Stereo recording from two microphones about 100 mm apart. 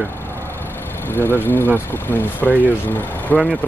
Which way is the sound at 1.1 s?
20° left (ahead or behind).